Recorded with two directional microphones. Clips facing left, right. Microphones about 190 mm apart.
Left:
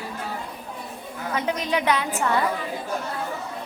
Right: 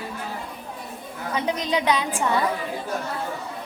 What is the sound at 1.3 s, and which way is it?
A woman's voice, 15° right (ahead or behind).